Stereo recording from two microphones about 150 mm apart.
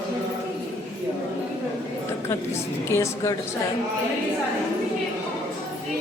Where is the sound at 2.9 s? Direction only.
20° left (ahead or behind).